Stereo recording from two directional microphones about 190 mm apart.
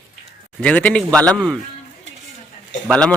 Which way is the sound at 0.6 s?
5° left (ahead or behind).